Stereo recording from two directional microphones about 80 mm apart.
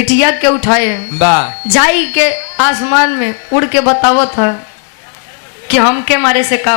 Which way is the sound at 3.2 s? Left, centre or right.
Centre.